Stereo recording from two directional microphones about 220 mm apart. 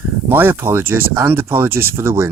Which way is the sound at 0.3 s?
10° right (ahead or behind).